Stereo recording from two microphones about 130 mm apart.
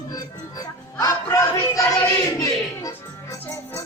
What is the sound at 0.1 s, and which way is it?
Speech, 30° left (ahead or behind).